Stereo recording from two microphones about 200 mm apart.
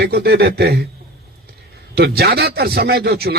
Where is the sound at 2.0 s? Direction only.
55° right (ahead or behind).